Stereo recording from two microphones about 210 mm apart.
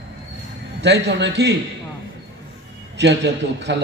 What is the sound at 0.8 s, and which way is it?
Speech, 55° right (ahead or behind).